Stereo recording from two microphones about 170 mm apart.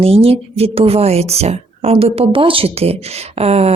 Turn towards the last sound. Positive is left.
turn(degrees=-40)  # may be behind; listen again after turning